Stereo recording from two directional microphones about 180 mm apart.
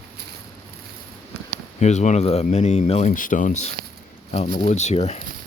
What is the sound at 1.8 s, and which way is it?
Speech, 40° left (ahead or behind).